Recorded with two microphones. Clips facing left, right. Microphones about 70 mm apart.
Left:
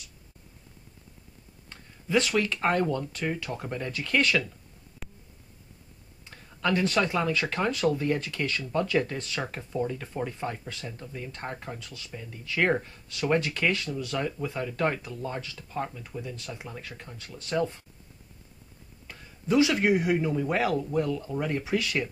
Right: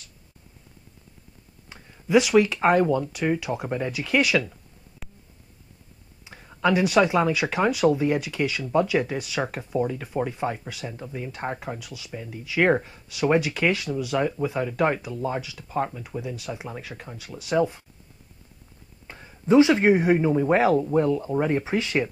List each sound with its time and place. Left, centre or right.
1.7 s speech: centre
5.0 s a sound: centre
6.2 s speech: centre
19.0 s speech: right